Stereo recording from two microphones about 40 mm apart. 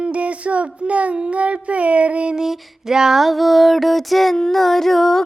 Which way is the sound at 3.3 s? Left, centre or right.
Centre.